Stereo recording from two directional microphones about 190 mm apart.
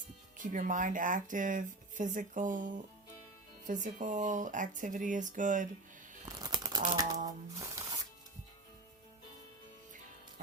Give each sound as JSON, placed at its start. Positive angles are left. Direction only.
{"t": 0.3, "sound": "speech", "side_deg": -45}
{"t": 6.2, "sound": "crumpling", "side_deg": -20}
{"t": 7.3, "sound": "a sound", "side_deg": -20}